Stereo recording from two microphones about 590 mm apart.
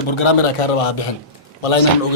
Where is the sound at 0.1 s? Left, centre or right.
Left.